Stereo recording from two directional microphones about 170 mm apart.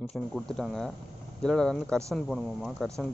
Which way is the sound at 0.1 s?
5° left (ahead or behind).